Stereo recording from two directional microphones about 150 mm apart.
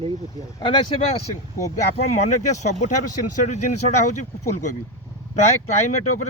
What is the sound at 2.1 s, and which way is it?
Speech, 50° left (ahead or behind).